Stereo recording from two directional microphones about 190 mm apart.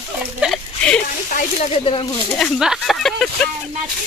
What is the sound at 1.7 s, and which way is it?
Speech, 30° left (ahead or behind).